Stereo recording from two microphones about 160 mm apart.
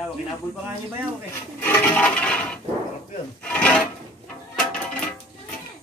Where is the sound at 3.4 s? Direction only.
10° left (ahead or behind).